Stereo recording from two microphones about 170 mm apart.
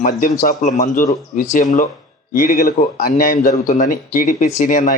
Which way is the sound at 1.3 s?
50° left (ahead or behind).